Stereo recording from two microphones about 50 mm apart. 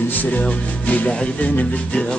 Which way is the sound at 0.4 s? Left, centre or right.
Left.